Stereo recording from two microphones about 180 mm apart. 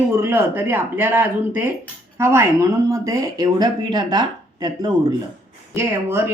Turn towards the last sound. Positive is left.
turn(degrees=-15)  # may be behind; listen again after turning